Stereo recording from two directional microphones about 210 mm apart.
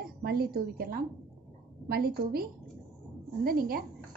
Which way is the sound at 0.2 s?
45° right (ahead or behind).